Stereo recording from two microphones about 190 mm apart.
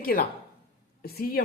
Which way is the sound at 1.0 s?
50° left (ahead or behind).